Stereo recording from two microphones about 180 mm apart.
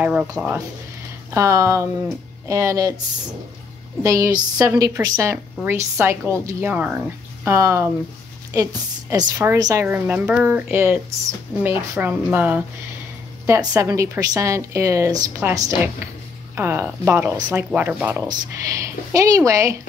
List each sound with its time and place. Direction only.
0.0 s a woman's voice: 5° right (ahead or behind)
1.3 s a woman's voice: 15° right (ahead or behind)
4.0 s a woman's voice: 20° right (ahead or behind)
9.1 s a woman's voice: 20° right (ahead or behind)